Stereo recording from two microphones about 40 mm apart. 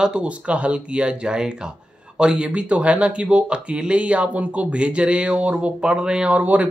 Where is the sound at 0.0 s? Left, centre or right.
Right.